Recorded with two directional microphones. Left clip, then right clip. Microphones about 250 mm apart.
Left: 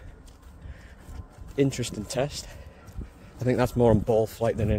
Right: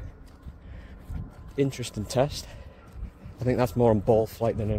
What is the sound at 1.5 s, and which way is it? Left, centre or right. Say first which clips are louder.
Speech: left 2 dB; centre.